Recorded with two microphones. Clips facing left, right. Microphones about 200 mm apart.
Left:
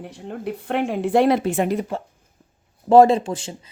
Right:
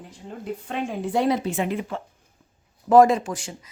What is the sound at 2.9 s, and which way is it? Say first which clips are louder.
Speech: left 3 dB; 30° left (ahead or behind).